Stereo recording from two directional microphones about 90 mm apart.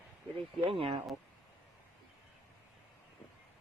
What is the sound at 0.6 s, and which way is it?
Speech, 85° right.